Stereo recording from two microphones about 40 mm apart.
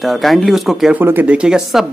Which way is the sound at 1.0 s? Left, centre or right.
Right.